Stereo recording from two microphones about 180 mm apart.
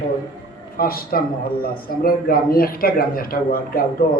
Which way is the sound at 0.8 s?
55° left (ahead or behind).